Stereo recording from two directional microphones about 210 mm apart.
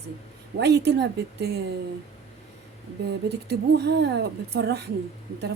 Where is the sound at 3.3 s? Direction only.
55° right (ahead or behind).